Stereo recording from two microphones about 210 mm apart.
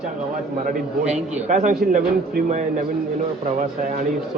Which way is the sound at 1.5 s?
40° right (ahead or behind).